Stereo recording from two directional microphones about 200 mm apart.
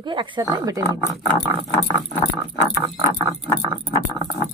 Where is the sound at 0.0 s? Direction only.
25° right (ahead or behind).